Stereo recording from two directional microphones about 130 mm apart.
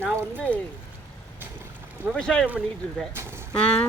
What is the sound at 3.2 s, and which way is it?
Speech, 15° right (ahead or behind).